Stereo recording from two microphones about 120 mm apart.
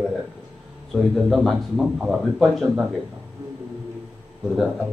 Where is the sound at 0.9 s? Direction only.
Centre (ahead or behind).